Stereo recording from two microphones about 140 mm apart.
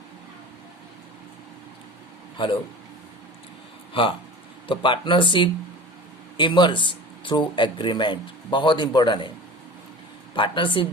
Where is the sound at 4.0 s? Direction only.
40° left (ahead or behind).